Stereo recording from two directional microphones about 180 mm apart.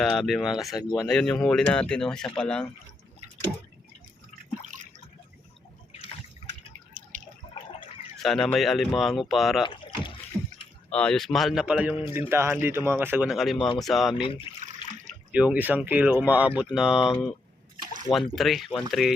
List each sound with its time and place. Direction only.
0.0 s speech: centre (ahead or behind)
0.8 s speech: 20° left (ahead or behind)
1.0 s speech: 5° left (ahead or behind)
7.0 s drip: 45° right (ahead or behind)
8.2 s speech: centre (ahead or behind)
10.3 s a sound: 5° left (ahead or behind)
10.9 s speech: 5° left (ahead or behind)
14.1 s speech: 30° left (ahead or behind)
15.3 s speech: 5° right (ahead or behind)
18.1 s speech: centre (ahead or behind)